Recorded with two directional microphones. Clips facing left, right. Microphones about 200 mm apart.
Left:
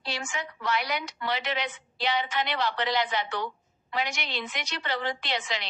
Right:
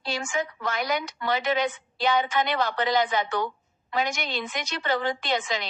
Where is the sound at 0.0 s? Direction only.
50° right (ahead or behind).